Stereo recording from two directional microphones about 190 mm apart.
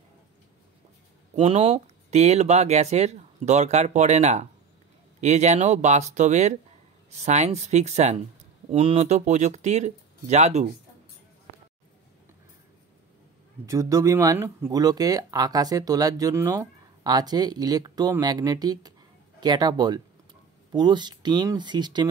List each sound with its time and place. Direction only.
1.3 s speech: 30° right (ahead or behind)
13.7 s speech: 15° right (ahead or behind)